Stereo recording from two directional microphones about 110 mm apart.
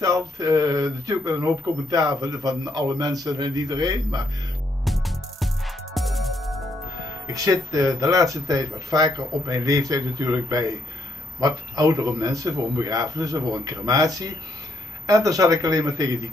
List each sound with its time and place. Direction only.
0.0 s speech: 30° right (ahead or behind)
4.8 s music: centre (ahead or behind)
7.3 s speech: 30° right (ahead or behind)